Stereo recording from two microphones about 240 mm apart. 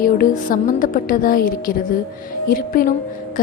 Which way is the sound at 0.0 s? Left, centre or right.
Left.